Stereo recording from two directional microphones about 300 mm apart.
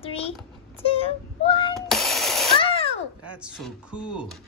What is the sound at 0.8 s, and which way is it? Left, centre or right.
Child singing, centre.